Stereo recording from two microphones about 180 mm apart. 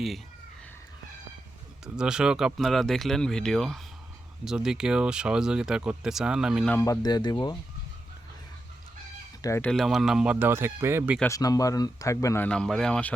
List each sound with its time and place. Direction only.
1.8 s speech: 5° right (ahead or behind)
6.7 s speech: 15° left (ahead or behind)
9.4 s speech: 15° left (ahead or behind)
9.6 s speech: centre (ahead or behind)
11.2 s speech: 20° left (ahead or behind)